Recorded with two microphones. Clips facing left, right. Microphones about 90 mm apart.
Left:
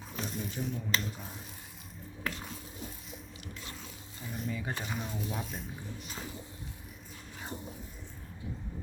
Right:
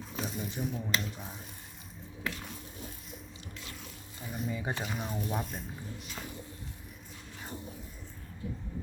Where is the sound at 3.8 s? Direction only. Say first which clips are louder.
Even; 5° right (ahead or behind).